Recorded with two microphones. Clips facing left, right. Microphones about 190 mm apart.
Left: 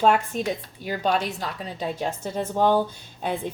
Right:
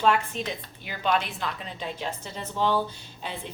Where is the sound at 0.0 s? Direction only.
45° left (ahead or behind).